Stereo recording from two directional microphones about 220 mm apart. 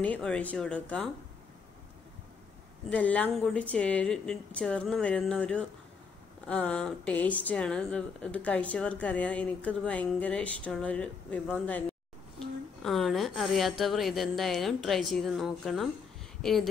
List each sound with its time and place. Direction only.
0.0 s speech: 5° left (ahead or behind)
2.9 s speech: 5° left (ahead or behind)
12.8 s speech: centre (ahead or behind)